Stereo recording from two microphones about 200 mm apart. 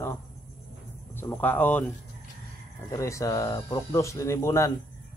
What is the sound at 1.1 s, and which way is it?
Speech, 10° left (ahead or behind).